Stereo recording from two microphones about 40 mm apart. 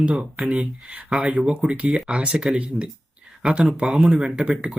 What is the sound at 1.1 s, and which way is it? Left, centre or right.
Speech, centre.